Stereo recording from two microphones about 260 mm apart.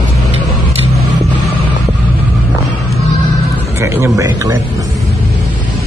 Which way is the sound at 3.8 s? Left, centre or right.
Centre.